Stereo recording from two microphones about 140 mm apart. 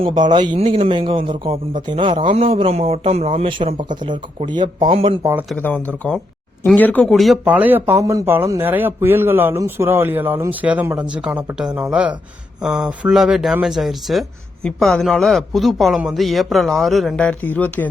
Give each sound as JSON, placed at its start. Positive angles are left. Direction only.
{"t": 0.0, "sound": "a man's voice", "side_deg": -35}
{"t": 0.6, "sound": "a man's voice", "side_deg": -45}
{"t": 5.2, "sound": "speech", "side_deg": -15}
{"t": 5.5, "sound": "speech", "side_deg": 10}
{"t": 7.1, "sound": "speech", "side_deg": 0}
{"t": 7.4, "sound": "speech", "side_deg": -10}